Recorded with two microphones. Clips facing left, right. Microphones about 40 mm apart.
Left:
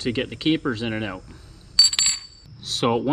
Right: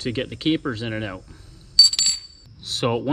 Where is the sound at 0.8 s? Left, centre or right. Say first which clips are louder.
Left 1 dB; left.